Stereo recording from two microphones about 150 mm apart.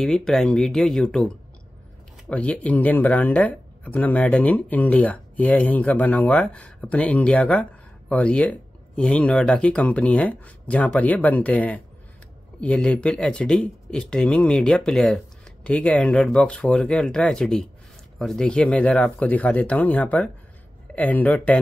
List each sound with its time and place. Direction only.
0.0 s speech: centre (ahead or behind)